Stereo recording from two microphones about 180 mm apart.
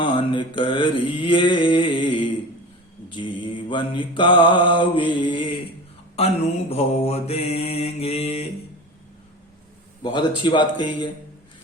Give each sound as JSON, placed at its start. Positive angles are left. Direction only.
{"t": 0.0, "sound": "mantra", "side_deg": 25}
{"t": 10.0, "sound": "mantra", "side_deg": 25}